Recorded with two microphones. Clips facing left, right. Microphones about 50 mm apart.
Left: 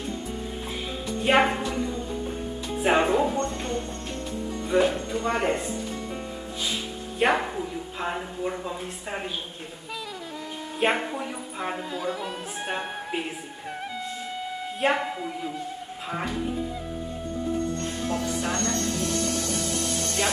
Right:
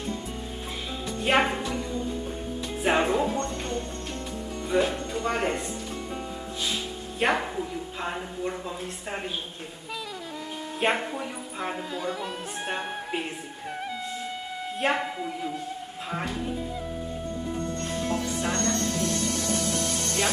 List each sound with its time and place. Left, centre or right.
1.2 s a woman's voice: centre
1.7 s music: centre
2.8 s speech: centre
3.4 s speech: left
4.7 s speech: centre
7.2 s speech: centre
10.8 s speech: centre
14.8 s speech: centre
18.5 s music: left